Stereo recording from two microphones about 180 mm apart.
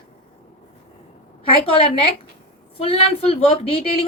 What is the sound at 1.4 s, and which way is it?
A woman's voice, 30° left (ahead or behind).